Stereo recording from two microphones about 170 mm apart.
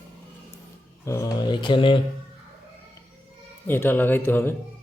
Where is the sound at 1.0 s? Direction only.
15° left (ahead or behind).